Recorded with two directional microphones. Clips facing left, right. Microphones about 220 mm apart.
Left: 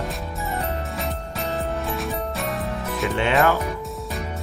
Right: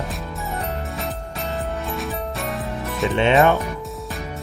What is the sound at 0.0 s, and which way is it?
Music, centre (ahead or behind).